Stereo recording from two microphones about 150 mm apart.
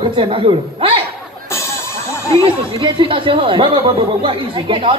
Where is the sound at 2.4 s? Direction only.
35° right (ahead or behind).